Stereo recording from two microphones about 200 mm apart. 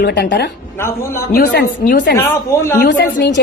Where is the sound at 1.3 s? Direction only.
55° left (ahead or behind).